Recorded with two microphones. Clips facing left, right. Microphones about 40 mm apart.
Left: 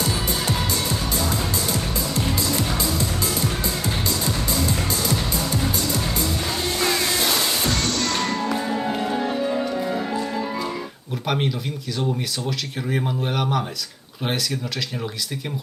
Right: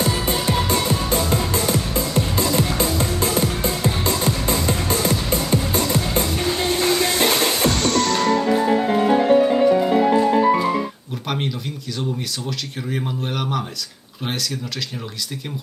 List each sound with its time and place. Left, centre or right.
0.0 s music: right
8.2 s music: right
11.3 s a sound: centre
12.5 s speech: centre